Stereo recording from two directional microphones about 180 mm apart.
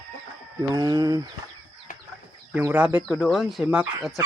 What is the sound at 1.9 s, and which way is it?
Chicken, 50° left (ahead or behind).